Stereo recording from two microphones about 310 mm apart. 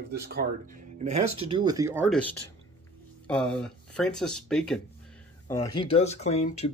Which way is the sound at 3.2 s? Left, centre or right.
Centre.